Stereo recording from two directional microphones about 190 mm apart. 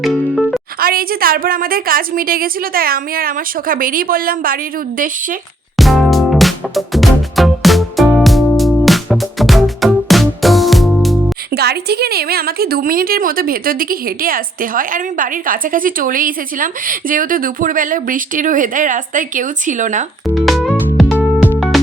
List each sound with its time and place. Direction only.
0.0 s music: centre (ahead or behind)
0.8 s a woman's voice: 50° right (ahead or behind)
5.7 s music: centre (ahead or behind)
11.5 s a woman's voice: 55° right (ahead or behind); by 20.1 s 40° right (ahead or behind)
20.2 s music: centre (ahead or behind)
21.2 s music: 5° right (ahead or behind)